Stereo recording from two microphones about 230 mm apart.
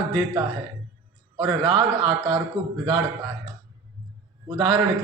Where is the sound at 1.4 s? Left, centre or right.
Right.